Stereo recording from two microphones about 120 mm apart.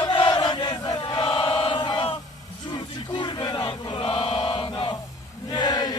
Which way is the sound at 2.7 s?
40° left (ahead or behind).